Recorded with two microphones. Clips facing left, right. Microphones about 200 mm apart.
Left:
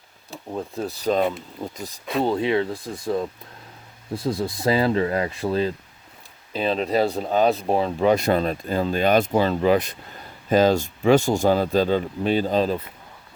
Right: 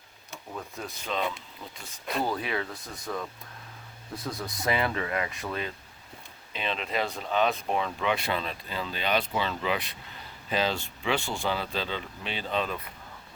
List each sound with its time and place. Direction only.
0.3 s speech: 35° left (ahead or behind)
2.2 s speech: 25° left (ahead or behind)